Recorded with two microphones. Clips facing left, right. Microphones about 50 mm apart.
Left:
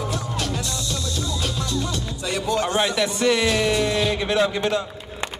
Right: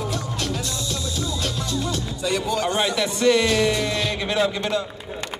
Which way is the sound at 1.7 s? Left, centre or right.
Centre.